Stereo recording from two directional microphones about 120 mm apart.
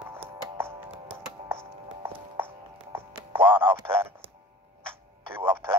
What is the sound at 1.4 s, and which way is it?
Music, 20° right (ahead or behind).